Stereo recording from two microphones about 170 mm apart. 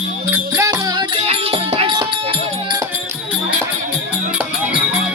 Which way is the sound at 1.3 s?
35° right (ahead or behind).